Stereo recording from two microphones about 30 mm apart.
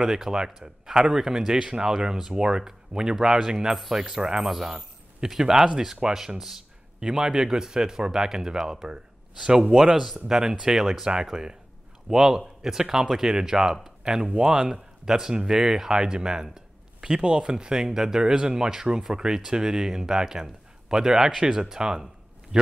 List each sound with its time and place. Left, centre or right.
0.3 s a man's voice: right
7.0 s speech: right
9.9 s speech: centre
14.0 s speech: right